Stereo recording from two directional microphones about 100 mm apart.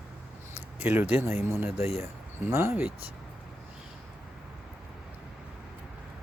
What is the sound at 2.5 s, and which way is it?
Speech, 25° right (ahead or behind).